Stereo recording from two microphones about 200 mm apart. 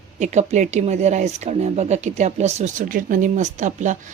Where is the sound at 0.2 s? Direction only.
35° right (ahead or behind).